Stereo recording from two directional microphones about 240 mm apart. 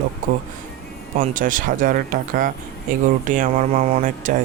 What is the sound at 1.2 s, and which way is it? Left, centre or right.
Speech, right.